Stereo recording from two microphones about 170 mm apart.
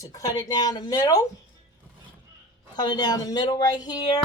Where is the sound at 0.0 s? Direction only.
20° left (ahead or behind).